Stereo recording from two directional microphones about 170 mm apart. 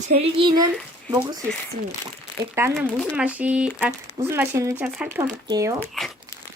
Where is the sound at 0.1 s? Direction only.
35° right (ahead or behind).